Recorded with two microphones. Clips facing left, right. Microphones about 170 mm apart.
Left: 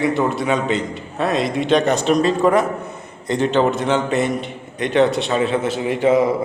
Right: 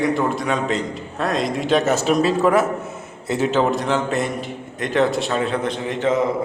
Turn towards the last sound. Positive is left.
turn(degrees=10)  # may be behind; listen again after turning